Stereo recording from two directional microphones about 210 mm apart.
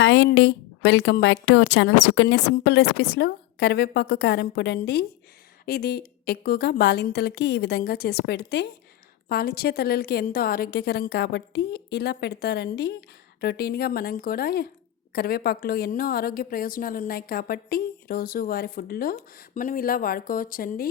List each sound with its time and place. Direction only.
0.0 s a woman's voice: 60° left (ahead or behind); by 20.8 s 40° left (ahead or behind)